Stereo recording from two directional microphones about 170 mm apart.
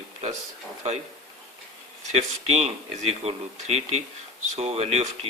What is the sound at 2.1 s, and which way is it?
Speech, 40° right (ahead or behind).